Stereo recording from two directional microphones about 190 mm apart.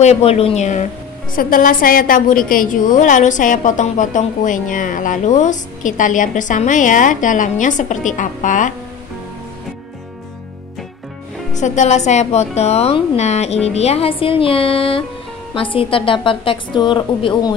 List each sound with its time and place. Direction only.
0.0 s a woman's voice: 35° left (ahead or behind)
11.5 s a woman's voice: 40° left (ahead or behind)